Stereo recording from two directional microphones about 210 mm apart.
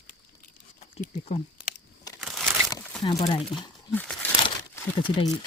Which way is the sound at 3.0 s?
25° left (ahead or behind).